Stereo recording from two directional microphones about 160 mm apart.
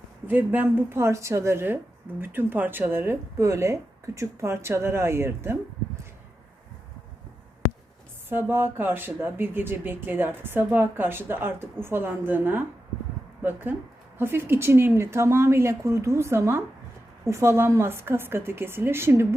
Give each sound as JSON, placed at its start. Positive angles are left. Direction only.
{"t": 0.3, "sound": "speech", "side_deg": -10}
{"t": 8.3, "sound": "speech", "side_deg": -15}